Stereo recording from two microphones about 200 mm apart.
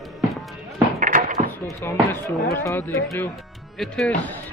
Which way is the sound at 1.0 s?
40° right (ahead or behind).